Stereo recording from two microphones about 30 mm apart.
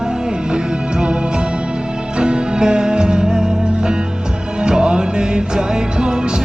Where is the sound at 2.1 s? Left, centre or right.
Right.